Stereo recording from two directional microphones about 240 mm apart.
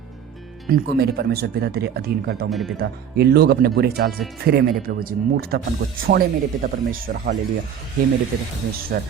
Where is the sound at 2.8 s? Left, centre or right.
Right.